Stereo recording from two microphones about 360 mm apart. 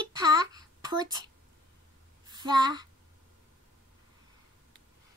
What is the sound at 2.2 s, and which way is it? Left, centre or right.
Speech, centre.